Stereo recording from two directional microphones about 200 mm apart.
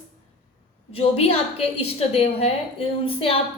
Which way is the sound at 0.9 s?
30° left (ahead or behind).